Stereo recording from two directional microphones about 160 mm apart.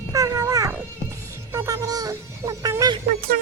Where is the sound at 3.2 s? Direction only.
70° right (ahead or behind).